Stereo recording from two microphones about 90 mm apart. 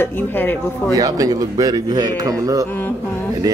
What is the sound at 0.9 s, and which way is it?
A man's voice, 45° right (ahead or behind).